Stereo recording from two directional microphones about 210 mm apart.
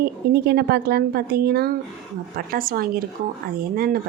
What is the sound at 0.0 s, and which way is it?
Speech, 50° right (ahead or behind).